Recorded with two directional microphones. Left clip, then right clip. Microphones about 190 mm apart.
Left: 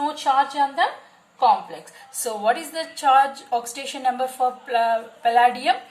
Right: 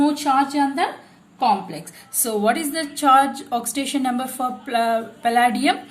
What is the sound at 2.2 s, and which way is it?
A woman's voice, 45° right (ahead or behind).